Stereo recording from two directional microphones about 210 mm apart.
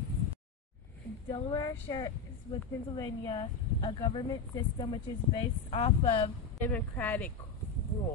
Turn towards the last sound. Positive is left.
turn(degrees=10)  # may be behind; listen again after turning